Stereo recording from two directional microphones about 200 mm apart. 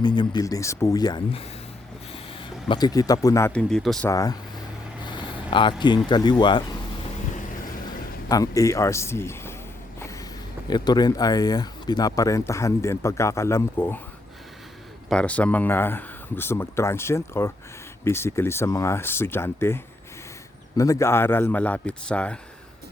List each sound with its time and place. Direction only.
0.0 s speech: 20° left (ahead or behind); by 4.1 s centre (ahead or behind)
4.1 s speech: 15° left (ahead or behind)
5.0 s vehicle: 25° left (ahead or behind)
6.1 s speech: 20° left (ahead or behind)
7.9 s speech: 15° left (ahead or behind)
10.0 s vehicle: 15° left (ahead or behind)
10.7 s speech: 20° left (ahead or behind)
15.1 s speech: 5° left (ahead or behind)